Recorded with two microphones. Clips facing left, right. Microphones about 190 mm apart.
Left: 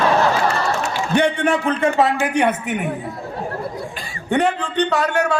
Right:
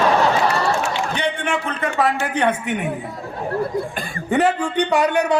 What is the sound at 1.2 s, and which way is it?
Speech, 40° left (ahead or behind).